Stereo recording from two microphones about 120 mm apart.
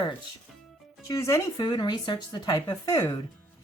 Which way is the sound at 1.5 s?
35° left (ahead or behind).